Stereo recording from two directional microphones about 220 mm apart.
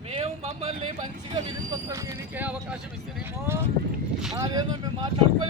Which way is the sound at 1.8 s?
15° right (ahead or behind).